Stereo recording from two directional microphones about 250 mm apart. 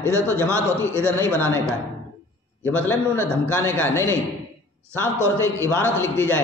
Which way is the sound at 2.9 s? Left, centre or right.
Centre.